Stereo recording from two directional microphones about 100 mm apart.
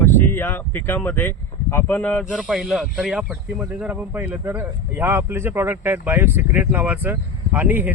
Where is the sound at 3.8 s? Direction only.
15° right (ahead or behind).